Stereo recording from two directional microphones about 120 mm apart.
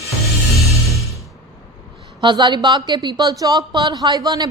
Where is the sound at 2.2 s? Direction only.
40° right (ahead or behind).